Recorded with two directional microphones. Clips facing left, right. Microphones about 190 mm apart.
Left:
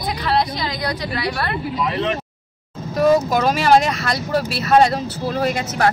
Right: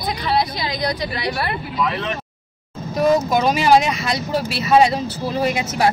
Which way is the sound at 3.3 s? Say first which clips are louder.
Even; centre (ahead or behind).